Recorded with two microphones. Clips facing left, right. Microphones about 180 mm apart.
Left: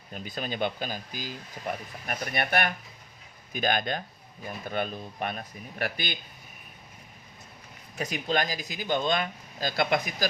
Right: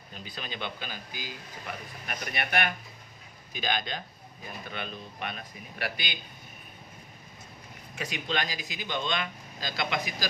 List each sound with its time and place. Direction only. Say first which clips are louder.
0.1 s speech: left 6 dB; 45° left (ahead or behind)
7.9 s speech: left 4 dB; 40° left (ahead or behind)